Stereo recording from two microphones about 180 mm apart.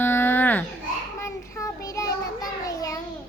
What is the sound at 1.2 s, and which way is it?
Child singing, 15° left (ahead or behind).